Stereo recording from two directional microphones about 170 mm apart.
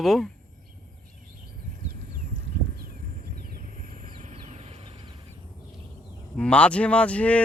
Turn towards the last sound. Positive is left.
turn(degrees=10)  # may be behind; listen again after turning